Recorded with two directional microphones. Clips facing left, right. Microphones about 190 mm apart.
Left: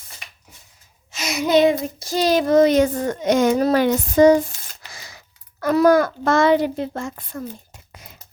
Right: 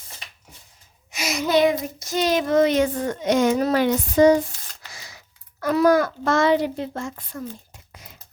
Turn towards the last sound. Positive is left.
turn(degrees=50)  # may be behind; listen again after turning